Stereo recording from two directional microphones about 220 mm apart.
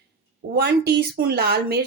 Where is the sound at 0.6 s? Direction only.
45° right (ahead or behind).